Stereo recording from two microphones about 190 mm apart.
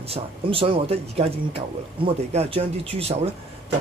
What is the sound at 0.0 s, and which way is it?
Speech, 30° right (ahead or behind).